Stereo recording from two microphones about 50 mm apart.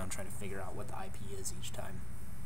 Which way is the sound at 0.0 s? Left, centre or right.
Centre.